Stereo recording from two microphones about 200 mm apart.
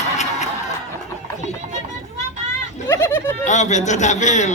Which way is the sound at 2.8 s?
10° left (ahead or behind).